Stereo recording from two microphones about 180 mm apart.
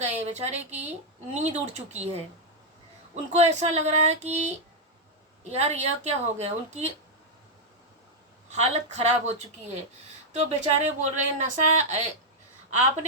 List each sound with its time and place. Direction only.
0.0 s a woman's voice: 40° right (ahead or behind)
3.3 s a woman's voice: 40° right (ahead or behind)
8.4 s a woman's voice: 40° right (ahead or behind)
10.3 s a woman's voice: 40° right (ahead or behind)